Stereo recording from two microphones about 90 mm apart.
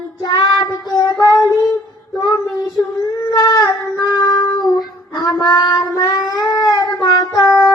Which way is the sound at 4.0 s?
45° left (ahead or behind).